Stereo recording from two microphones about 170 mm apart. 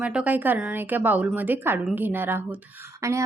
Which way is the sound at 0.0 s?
5° right (ahead or behind).